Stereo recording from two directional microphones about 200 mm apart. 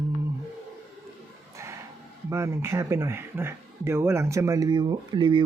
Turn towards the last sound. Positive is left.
turn(degrees=-25)  # may be behind; listen again after turning